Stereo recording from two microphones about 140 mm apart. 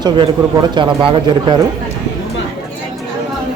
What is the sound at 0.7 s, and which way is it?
Speech, 35° right (ahead or behind).